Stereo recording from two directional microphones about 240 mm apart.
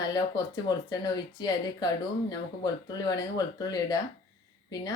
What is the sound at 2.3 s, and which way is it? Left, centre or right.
A woman's voice, centre.